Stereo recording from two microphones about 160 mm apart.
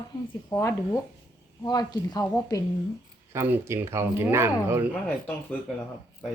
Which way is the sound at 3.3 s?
15° right (ahead or behind).